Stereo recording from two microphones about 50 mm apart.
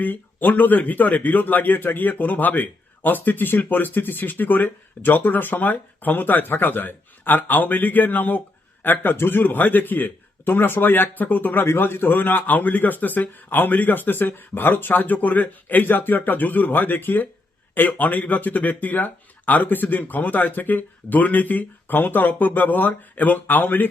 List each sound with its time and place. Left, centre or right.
0.0 s a man's voice: left